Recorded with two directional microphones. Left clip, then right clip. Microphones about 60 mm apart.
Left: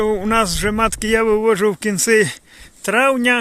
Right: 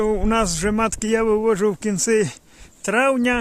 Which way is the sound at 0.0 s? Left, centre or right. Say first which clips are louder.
Left 3 dB; centre.